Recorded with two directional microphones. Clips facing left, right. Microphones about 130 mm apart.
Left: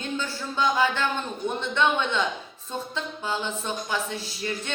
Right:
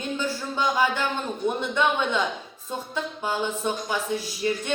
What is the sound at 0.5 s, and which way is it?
Speech, 15° right (ahead or behind).